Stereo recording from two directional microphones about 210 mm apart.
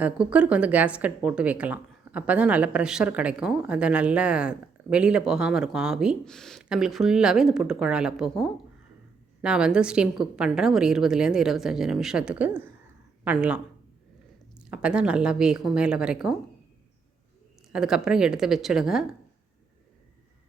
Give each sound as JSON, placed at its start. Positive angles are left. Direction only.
{"t": 0.0, "sound": "speech", "side_deg": -5}
{"t": 17.7, "sound": "speech", "side_deg": -5}